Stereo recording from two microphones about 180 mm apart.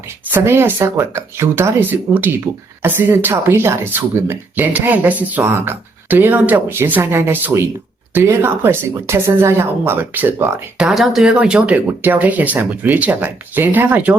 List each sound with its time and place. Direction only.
0.3 s speech: 10° right (ahead or behind)
10.8 s speech: centre (ahead or behind)